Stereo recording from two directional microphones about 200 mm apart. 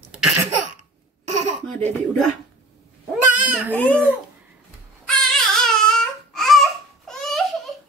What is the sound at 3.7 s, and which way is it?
Baby cry, 5° left (ahead or behind).